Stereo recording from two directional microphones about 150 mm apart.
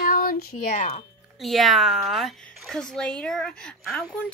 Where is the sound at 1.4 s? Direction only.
Centre (ahead or behind).